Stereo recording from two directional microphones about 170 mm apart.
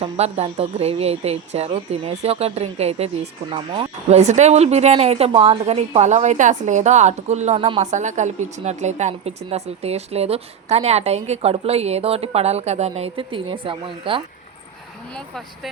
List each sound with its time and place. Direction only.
0.0 s speech: 35° right (ahead or behind)
15.1 s speech: centre (ahead or behind)